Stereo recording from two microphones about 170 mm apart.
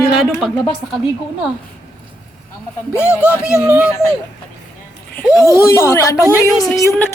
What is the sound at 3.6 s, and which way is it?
Speech, 10° right (ahead or behind).